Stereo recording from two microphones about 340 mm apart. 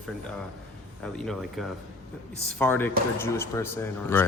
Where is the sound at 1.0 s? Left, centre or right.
Centre.